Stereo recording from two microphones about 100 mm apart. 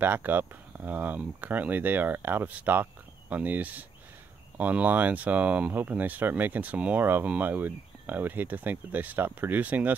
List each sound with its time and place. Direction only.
0.0 s speech: 20° right (ahead or behind)